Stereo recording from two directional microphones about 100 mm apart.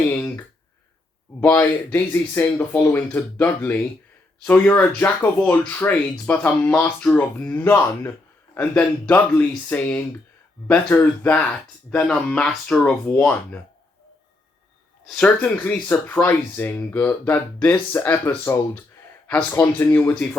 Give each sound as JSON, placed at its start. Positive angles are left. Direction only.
{"t": 0.1, "sound": "a sound", "side_deg": 20}
{"t": 1.9, "sound": "speech", "side_deg": 20}
{"t": 15.0, "sound": "speech", "side_deg": 10}